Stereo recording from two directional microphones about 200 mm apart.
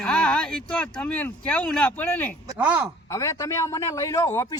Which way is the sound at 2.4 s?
10° right (ahead or behind).